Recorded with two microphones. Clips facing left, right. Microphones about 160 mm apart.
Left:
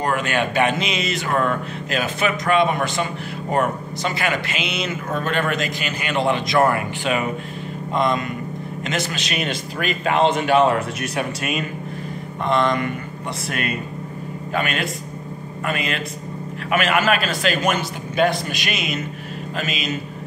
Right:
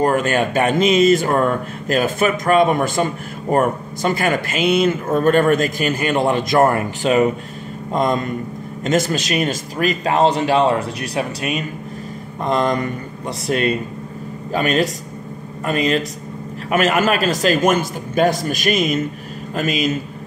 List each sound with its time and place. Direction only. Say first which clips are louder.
0.0 s a man's voice: right 5 dB; 45° right (ahead or behind)